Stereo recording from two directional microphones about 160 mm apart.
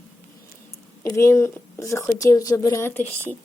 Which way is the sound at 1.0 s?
15° left (ahead or behind).